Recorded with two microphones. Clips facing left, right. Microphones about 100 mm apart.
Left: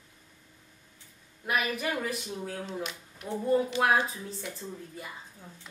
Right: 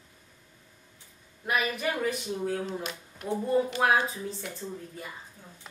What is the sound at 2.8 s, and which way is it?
Speech, 45° right (ahead or behind).